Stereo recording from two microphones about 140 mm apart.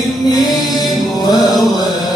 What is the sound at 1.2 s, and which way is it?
Music, 30° left (ahead or behind).